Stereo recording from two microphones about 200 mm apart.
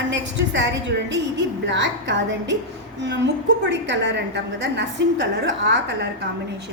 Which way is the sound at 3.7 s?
60° right (ahead or behind).